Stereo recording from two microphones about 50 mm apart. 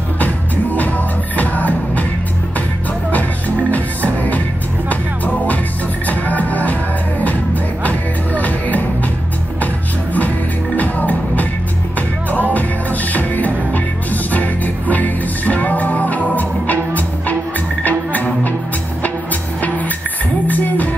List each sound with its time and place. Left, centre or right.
0.2 s music: left
3.1 s music: left
8.4 s music: left
10.8 s music: left
13.7 s music: left
20.4 s music: left